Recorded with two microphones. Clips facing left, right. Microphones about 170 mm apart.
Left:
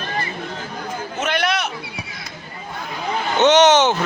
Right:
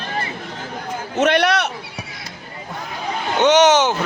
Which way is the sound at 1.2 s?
65° right (ahead or behind).